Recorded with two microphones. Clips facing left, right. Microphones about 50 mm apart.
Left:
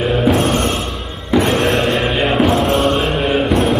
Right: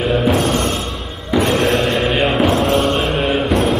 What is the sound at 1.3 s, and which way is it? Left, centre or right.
Music, centre.